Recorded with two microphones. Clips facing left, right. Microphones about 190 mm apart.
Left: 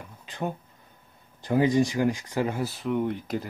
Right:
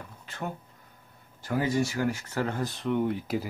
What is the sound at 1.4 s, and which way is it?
Speech, 20° left (ahead or behind).